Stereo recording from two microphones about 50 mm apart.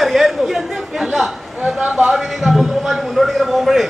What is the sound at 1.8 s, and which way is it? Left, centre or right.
A man's voice, centre.